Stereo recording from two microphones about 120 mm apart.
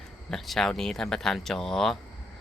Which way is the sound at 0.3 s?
5° left (ahead or behind).